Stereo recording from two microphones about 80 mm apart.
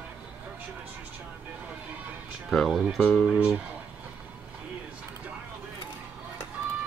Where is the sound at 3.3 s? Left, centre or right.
Centre.